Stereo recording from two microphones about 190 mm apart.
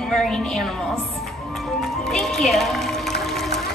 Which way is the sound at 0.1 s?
Centre (ahead or behind).